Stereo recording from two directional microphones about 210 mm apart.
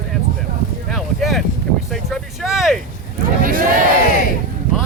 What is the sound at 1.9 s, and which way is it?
Vehicle, centre (ahead or behind).